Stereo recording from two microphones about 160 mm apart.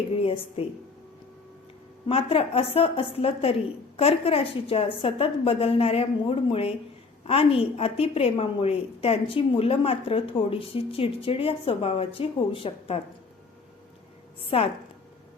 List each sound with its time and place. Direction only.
0.2 s a woman's voice: 35° left (ahead or behind)
2.0 s a woman's voice: 35° left (ahead or behind)
14.5 s a woman's voice: 35° left (ahead or behind)